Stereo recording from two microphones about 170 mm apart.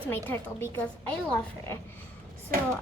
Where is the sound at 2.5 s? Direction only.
55° right (ahead or behind).